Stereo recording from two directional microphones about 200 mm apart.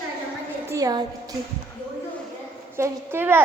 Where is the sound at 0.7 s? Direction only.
20° right (ahead or behind).